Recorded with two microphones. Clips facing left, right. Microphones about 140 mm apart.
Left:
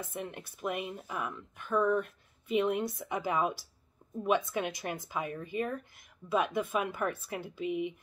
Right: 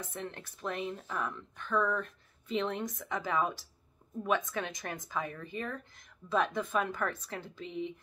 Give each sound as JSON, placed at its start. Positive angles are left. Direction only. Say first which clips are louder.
{"t": 0.0, "sound": "speech", "louder": "left 2 dB", "side_deg": 10}
{"t": 4.0, "sound": "a sound", "louder": "left 5 dB", "side_deg": 20}
{"t": 4.5, "sound": "speech", "louder": "left 3 dB", "side_deg": 15}